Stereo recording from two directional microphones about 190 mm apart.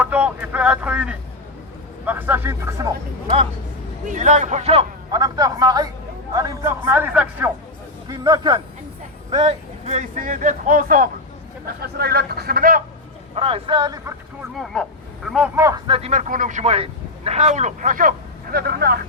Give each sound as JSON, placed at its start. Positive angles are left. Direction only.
{"t": 0.0, "sound": "a man's voice", "side_deg": -10}
{"t": 4.1, "sound": "speech", "side_deg": -40}
{"t": 5.1, "sound": "a man's voice", "side_deg": -20}
{"t": 8.0, "sound": "speech", "side_deg": -20}
{"t": 13.3, "sound": "a man's voice", "side_deg": -30}
{"t": 14.5, "sound": "speech", "side_deg": 0}
{"t": 15.5, "sound": "a man's voice", "side_deg": -15}
{"t": 15.9, "sound": "speech", "side_deg": -35}
{"t": 18.5, "sound": "speech", "side_deg": -55}